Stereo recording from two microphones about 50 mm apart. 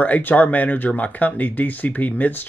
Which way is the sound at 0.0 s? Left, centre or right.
Left.